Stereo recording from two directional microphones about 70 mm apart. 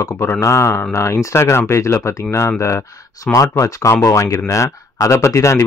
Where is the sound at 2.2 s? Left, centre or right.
Left.